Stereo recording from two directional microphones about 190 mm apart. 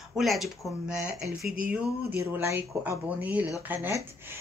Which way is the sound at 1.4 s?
50° right (ahead or behind).